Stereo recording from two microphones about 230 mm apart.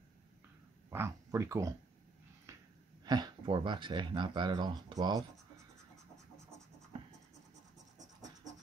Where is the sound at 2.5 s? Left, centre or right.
Centre.